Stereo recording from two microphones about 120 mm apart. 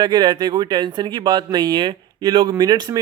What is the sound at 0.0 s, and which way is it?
Speech, 40° right (ahead or behind).